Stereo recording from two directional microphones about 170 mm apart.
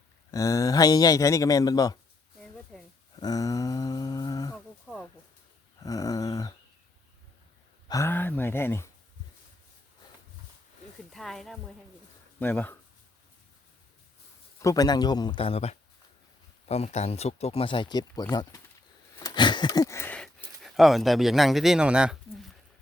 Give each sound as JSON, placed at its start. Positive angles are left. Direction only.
{"t": 0.3, "sound": "speech", "side_deg": 20}
{"t": 2.7, "sound": "a sound", "side_deg": 0}
{"t": 3.2, "sound": "speech", "side_deg": 20}
{"t": 4.9, "sound": "speech", "side_deg": -10}
{"t": 5.8, "sound": "speech", "side_deg": 20}
{"t": 7.9, "sound": "speech", "side_deg": 15}
{"t": 11.1, "sound": "speech", "side_deg": 0}
{"t": 14.6, "sound": "speech", "side_deg": 20}
{"t": 19.1, "sound": "a sound", "side_deg": 20}